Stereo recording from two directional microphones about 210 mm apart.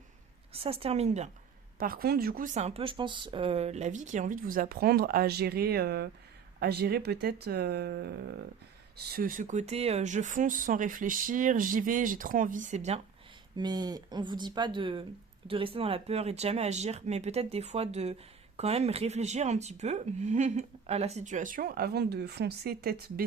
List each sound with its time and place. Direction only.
0.5 s speech: 25° right (ahead or behind)
1.8 s speech: 45° right (ahead or behind)
13.6 s speech: 20° right (ahead or behind); by 23.2 s 45° right (ahead or behind)